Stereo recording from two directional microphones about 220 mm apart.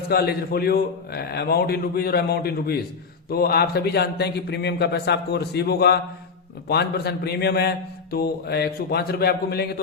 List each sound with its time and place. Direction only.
0.1 s a man's voice: 45° left (ahead or behind)